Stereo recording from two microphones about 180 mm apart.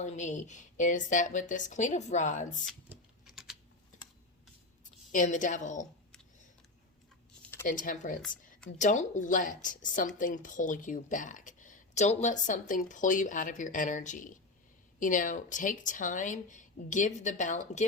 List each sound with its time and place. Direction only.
0.0 s speech: 40° left (ahead or behind)
2.9 s typing: centre (ahead or behind)
5.1 s speech: 45° left (ahead or behind)
7.6 s speech: 50° left (ahead or behind)